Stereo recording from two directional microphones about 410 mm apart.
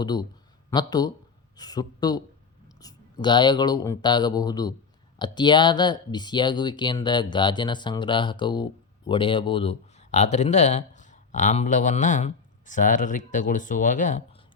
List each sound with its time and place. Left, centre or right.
0.0 s speech: centre